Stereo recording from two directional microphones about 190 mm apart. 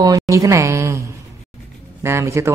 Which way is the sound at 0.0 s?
15° right (ahead or behind).